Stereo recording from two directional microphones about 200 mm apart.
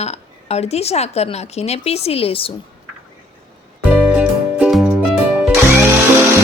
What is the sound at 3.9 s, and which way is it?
Music, 5° right (ahead or behind).